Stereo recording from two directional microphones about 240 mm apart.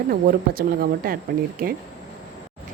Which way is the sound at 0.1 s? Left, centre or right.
Right.